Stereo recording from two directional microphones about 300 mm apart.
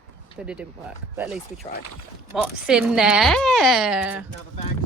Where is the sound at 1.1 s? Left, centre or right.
Centre.